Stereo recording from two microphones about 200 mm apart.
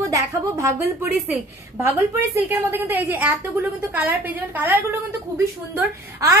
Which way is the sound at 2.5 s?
10° right (ahead or behind).